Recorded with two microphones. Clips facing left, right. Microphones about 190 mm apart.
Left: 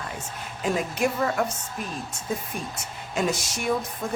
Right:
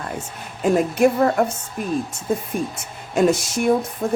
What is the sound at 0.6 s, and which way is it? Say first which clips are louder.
Speech: right 9 dB; 50° right (ahead or behind).